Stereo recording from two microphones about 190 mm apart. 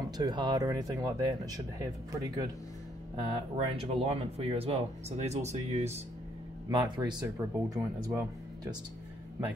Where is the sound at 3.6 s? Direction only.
30° right (ahead or behind).